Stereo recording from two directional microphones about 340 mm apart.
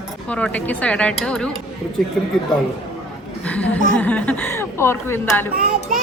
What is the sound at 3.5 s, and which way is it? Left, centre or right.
A woman's voice, centre.